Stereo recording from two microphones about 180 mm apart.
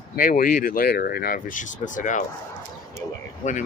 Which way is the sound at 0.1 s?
50° left (ahead or behind).